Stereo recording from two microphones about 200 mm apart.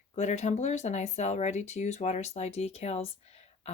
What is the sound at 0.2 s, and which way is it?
Speech, 35° left (ahead or behind).